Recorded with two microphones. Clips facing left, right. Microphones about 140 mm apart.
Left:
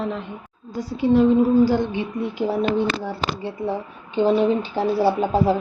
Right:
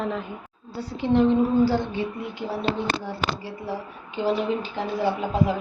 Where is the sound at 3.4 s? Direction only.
25° left (ahead or behind).